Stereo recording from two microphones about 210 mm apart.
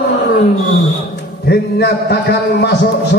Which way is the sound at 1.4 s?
50° left (ahead or behind).